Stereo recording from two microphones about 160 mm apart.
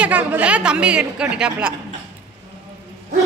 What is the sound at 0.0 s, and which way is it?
Speech, 10° right (ahead or behind).